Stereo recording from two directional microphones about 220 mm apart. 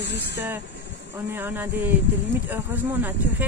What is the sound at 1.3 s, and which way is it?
Speech, 10° right (ahead or behind).